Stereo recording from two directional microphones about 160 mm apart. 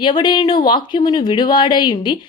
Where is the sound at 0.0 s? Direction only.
30° left (ahead or behind).